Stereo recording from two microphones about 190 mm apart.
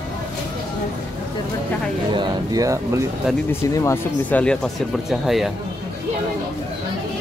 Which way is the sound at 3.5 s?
15° left (ahead or behind).